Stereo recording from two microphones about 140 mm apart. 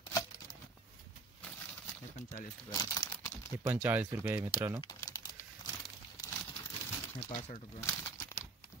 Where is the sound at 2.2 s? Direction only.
50° left (ahead or behind).